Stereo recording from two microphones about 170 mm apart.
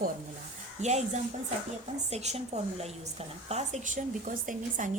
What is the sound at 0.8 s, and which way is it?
Speech, 40° right (ahead or behind).